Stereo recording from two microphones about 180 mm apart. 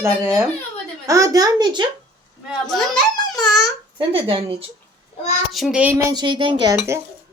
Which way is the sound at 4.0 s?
30° right (ahead or behind).